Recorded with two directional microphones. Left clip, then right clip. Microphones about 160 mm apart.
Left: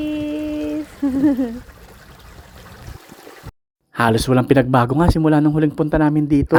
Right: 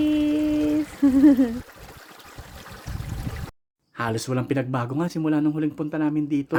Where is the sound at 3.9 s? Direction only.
55° left (ahead or behind).